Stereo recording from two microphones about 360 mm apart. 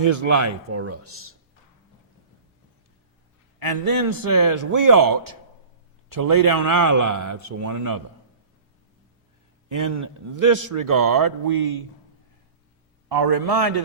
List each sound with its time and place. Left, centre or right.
0.0 s a man's voice: right
3.6 s a man's voice: right
9.6 s a man's voice: right
13.1 s a man's voice: right